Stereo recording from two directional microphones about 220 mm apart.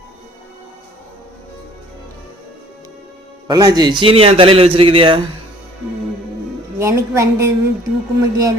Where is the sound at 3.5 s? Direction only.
20° right (ahead or behind).